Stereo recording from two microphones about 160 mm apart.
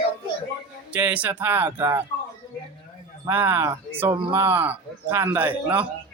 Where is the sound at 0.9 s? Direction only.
10° right (ahead or behind).